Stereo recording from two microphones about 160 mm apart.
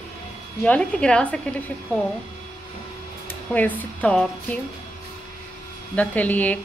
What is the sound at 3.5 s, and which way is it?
Speech, 10° left (ahead or behind).